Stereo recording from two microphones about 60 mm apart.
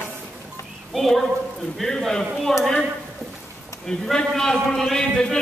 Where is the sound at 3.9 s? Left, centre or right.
Centre.